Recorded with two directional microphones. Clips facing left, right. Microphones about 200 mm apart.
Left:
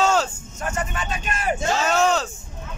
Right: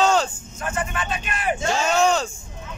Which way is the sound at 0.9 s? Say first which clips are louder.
Even; 40° left (ahead or behind).